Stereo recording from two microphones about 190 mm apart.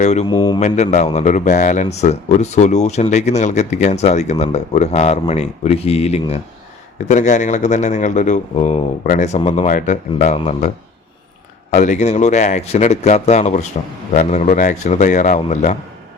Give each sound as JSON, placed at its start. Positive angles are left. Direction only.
{"t": 0.0, "sound": "speech", "side_deg": 35}
{"t": 0.3, "sound": "speech", "side_deg": 20}
{"t": 0.6, "sound": "speech", "side_deg": 40}
{"t": 11.8, "sound": "speech", "side_deg": 40}